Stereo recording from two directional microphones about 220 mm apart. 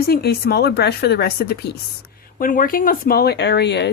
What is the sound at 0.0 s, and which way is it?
Speech, 45° left (ahead or behind).